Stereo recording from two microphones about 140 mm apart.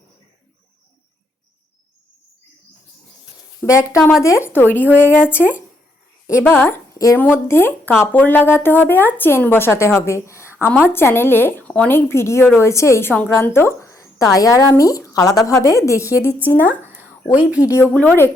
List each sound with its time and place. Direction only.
3.6 s a woman's voice: 20° left (ahead or behind)
6.4 s a woman's voice: 15° left (ahead or behind)
17.0 s a sound: 20° left (ahead or behind)
17.6 s a woman's voice: 20° left (ahead or behind)